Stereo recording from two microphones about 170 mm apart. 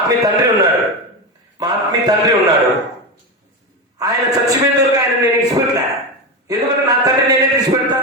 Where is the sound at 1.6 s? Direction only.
20° right (ahead or behind).